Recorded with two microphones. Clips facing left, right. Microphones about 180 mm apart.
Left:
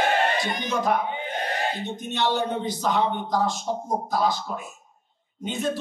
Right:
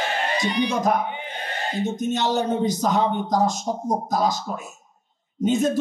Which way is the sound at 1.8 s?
45° right (ahead or behind).